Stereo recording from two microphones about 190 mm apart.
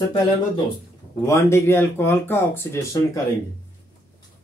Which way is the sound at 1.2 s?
15° left (ahead or behind).